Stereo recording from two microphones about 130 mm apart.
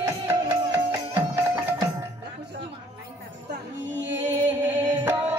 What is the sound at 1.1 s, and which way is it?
Music, 15° right (ahead or behind).